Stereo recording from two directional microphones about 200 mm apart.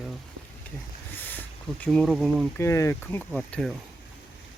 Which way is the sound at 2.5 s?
15° left (ahead or behind).